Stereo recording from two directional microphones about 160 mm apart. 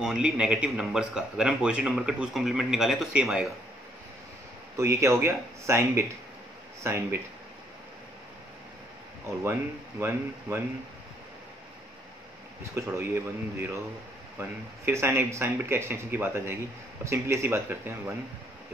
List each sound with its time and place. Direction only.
0.0 s speech: 5° right (ahead or behind)
4.7 s speech: 20° right (ahead or behind)
9.4 s speech: 15° right (ahead or behind)
12.7 s speech: 15° right (ahead or behind)